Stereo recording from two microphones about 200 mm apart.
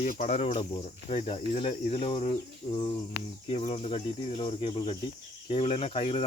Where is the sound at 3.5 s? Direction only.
30° left (ahead or behind).